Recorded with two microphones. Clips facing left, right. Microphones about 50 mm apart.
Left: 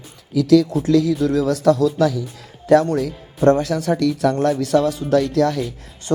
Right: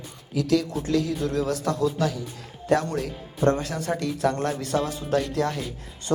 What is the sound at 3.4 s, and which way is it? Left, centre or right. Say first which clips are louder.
Speech: left 7 dB; left.